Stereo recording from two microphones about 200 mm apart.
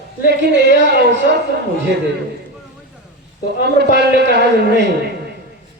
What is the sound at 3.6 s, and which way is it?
A man's voice, 55° right (ahead or behind).